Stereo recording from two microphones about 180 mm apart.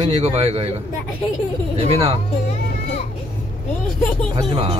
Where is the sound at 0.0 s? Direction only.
35° right (ahead or behind).